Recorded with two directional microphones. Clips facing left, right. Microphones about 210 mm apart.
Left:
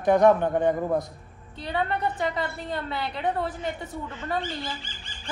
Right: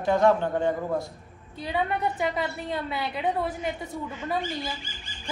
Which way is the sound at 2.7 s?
5° right (ahead or behind).